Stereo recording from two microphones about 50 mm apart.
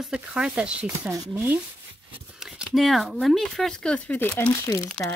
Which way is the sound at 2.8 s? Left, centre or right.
Centre.